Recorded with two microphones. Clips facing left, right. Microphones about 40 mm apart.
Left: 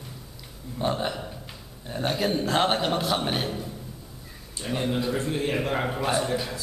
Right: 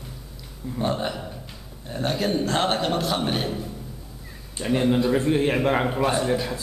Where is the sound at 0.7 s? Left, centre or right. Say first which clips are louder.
Right 1 dB; centre.